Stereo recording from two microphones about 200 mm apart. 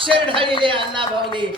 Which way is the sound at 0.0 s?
25° right (ahead or behind).